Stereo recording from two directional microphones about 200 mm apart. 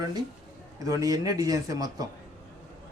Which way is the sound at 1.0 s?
20° right (ahead or behind).